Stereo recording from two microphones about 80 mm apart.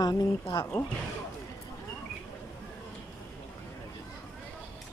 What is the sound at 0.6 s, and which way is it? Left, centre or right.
Speech, left.